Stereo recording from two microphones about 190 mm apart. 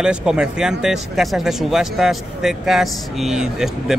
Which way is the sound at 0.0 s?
5° right (ahead or behind).